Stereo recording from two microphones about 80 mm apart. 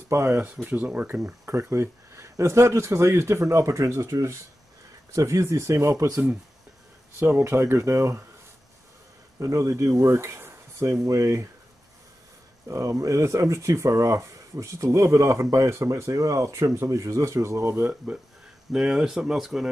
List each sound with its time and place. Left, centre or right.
0.1 s speech: right
0.7 s speech: centre
1.1 s speech: right
7.2 s speech: right
9.4 s speech: right
12.6 s speech: right
17.8 s speech: centre